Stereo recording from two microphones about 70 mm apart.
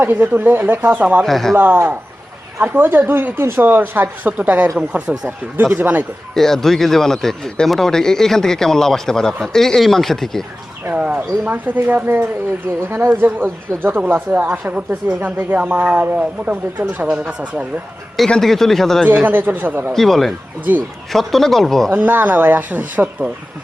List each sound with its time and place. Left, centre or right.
0.0 s speech: right
1.2 s speech: centre
1.5 s speech: right; by 5.1 s centre
5.7 s speech: right
6.3 s a man's voice: centre
10.9 s speech: centre
12.9 s speech: right
14.4 s speech: centre
18.3 s speech: centre
19.0 s speech: right
19.9 s speech: centre
20.7 s speech: right
21.1 s speech: centre
21.9 s speech: right